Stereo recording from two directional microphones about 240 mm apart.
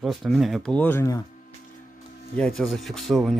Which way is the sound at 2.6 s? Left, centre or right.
Centre.